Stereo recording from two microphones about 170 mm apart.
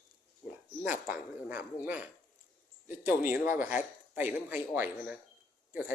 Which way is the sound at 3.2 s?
10° right (ahead or behind).